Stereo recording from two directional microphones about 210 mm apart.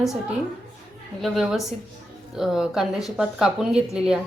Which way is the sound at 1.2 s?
Centre (ahead or behind).